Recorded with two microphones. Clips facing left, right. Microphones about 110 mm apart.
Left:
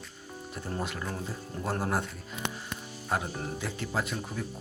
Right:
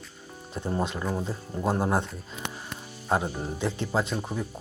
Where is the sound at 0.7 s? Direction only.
20° right (ahead or behind).